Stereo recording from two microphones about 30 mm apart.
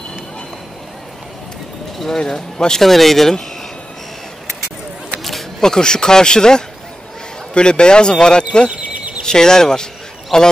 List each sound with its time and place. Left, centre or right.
2.1 s a man's voice: left
2.8 s speech: centre
5.6 s a man's voice: left
8.6 s a sound: right
9.2 s a man's voice: left